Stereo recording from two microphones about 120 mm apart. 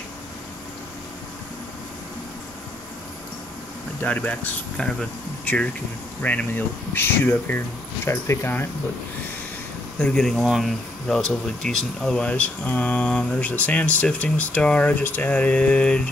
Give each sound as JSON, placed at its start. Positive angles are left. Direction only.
{"t": 4.0, "sound": "speech", "side_deg": 10}
{"t": 9.9, "sound": "speech", "side_deg": 5}